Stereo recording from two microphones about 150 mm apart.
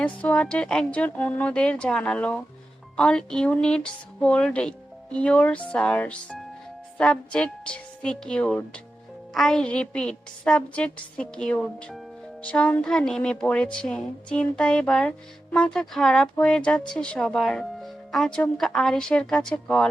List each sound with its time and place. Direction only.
0.0 s a woman's voice: 10° left (ahead or behind)